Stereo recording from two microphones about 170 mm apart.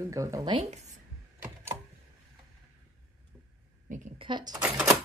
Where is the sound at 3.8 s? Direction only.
50° right (ahead or behind).